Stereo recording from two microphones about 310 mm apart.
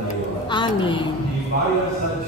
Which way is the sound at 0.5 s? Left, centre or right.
Centre.